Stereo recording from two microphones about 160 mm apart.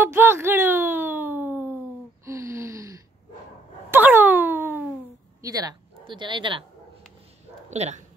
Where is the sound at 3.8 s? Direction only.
10° right (ahead or behind).